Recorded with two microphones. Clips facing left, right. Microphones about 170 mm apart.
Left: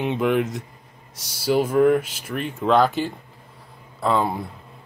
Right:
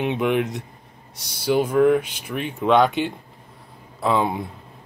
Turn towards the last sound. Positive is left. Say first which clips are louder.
# right 1 dB
turn(degrees=0)  # may be behind; listen again after turning